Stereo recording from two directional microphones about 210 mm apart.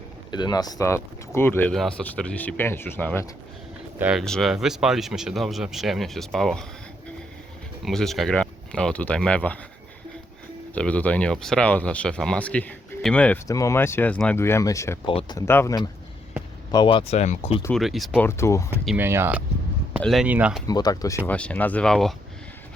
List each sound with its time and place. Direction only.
0.3 s speech: 20° left (ahead or behind)
3.9 s speech: 5° right (ahead or behind)
7.9 s speech: centre (ahead or behind)
10.8 s speech: 5° left (ahead or behind); by 17.6 s 30° left (ahead or behind)
17.7 s speech: centre (ahead or behind)
18.3 s speech: 15° left (ahead or behind)
18.9 s speech: 10° right (ahead or behind)
20.0 s speech: centre (ahead or behind)
20.7 s speech: 20° left (ahead or behind)
21.2 s speech: 5° left (ahead or behind)